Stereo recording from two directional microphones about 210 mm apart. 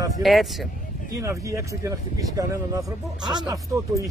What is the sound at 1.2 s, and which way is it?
Speech, 15° right (ahead or behind).